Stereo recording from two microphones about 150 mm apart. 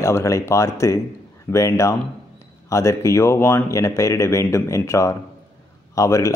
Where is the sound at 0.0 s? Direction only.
20° left (ahead or behind).